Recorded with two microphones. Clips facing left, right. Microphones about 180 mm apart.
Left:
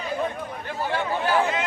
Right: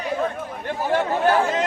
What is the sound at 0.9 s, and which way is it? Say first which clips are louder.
Chatter: right 6 dB; 45° right (ahead or behind).